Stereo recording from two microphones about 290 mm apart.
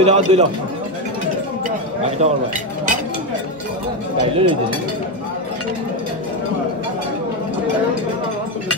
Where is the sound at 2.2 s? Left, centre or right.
Right.